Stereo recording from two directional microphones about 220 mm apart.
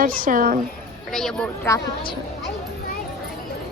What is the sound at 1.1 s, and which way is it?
Speech, 5° left (ahead or behind).